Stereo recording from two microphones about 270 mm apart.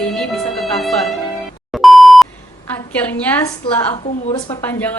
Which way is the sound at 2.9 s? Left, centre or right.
Centre.